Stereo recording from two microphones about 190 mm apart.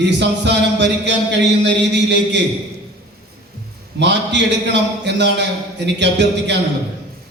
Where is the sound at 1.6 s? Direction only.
65° right (ahead or behind).